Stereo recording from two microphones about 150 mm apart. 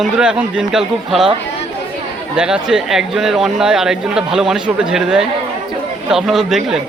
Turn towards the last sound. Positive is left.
turn(degrees=-5)  # may be behind; listen again after turning